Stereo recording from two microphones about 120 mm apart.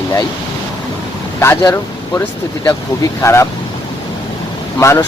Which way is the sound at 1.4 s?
15° left (ahead or behind).